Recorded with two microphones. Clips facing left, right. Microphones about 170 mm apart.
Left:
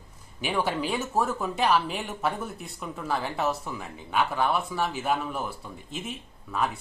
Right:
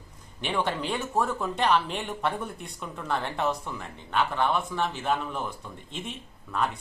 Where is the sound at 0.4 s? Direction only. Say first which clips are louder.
Left 1 dB; 5° left (ahead or behind).